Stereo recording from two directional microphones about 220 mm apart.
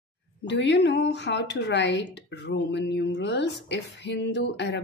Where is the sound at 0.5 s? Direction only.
55° left (ahead or behind).